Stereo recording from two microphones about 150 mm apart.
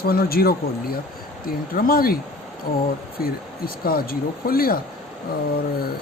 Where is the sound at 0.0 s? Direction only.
90° left.